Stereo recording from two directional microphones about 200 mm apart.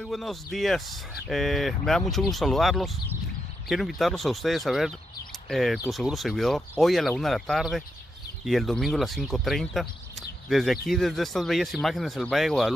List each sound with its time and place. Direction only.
0.0 s speech: centre (ahead or behind)